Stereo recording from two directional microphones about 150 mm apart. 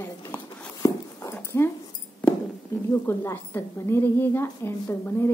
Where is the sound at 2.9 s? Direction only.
15° left (ahead or behind).